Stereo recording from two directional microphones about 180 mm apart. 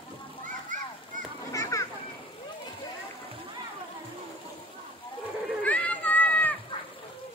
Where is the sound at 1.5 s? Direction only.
15° left (ahead or behind).